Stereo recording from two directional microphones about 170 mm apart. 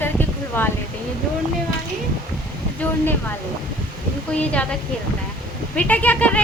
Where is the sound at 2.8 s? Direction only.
10° left (ahead or behind).